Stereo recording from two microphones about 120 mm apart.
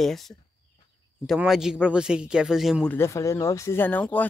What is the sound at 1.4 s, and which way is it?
A man's voice, 5° right (ahead or behind).